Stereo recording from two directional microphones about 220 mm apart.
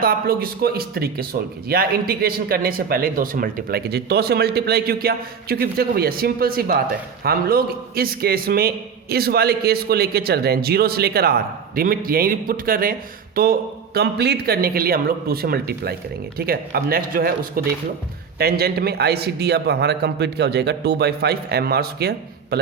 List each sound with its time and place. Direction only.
0.0 s a man's voice: 40° right (ahead or behind)